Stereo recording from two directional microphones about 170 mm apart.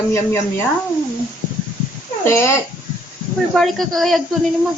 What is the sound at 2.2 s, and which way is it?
Speech, 15° left (ahead or behind).